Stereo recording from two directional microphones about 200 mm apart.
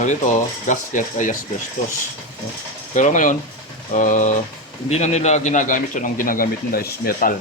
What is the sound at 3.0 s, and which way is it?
A man's voice, 40° left (ahead or behind).